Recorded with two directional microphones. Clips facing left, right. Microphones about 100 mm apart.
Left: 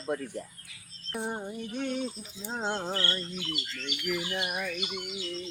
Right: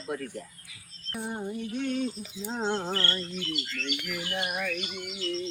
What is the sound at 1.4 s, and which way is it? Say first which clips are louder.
Bird: right 2 dB; 10° left (ahead or behind).